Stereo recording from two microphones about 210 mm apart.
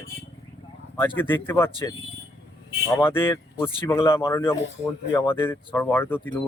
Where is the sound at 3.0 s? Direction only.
10° left (ahead or behind).